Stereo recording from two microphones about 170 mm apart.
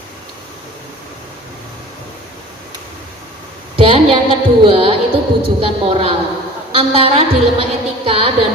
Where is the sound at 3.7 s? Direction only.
30° right (ahead or behind).